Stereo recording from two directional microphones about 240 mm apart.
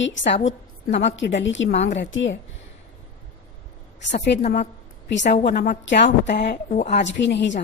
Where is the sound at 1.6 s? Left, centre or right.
Left.